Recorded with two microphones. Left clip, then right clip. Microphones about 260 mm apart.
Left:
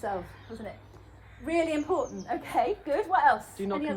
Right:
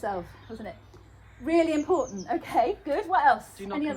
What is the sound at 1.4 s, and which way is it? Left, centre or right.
A woman's voice, right.